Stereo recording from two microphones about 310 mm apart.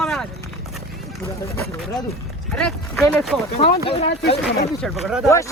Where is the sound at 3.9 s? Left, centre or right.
Centre.